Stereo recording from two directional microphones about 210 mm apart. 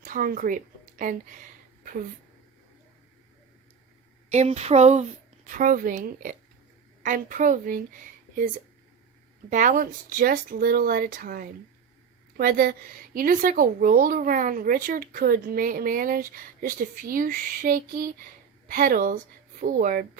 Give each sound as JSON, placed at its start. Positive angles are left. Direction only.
{"t": 0.0, "sound": "a woman's voice", "side_deg": -40}
{"t": 4.3, "sound": "speech", "side_deg": -30}